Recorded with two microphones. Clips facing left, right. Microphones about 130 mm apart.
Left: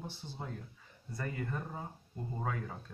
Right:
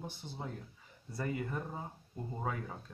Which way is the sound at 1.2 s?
10° right (ahead or behind).